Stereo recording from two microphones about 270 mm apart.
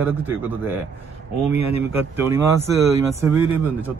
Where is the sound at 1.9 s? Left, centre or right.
Centre.